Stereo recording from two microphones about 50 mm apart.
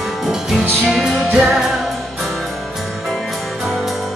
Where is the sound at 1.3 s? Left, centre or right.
Centre.